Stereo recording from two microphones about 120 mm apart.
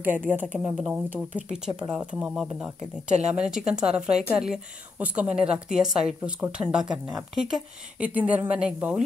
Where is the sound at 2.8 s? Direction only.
70° right (ahead or behind).